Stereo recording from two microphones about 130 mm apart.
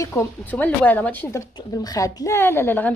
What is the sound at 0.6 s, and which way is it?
A woman's voice, 15° left (ahead or behind).